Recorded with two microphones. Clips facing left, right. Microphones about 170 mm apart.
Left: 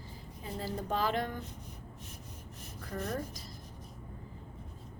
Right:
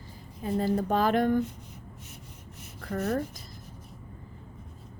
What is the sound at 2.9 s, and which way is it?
Speech, 70° right (ahead or behind).